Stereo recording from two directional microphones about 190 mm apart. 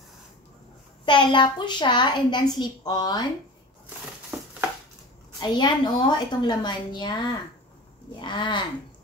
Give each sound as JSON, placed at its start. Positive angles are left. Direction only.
{"t": 1.0, "sound": "a woman's voice", "side_deg": 25}
{"t": 5.4, "sound": "a woman's voice", "side_deg": 25}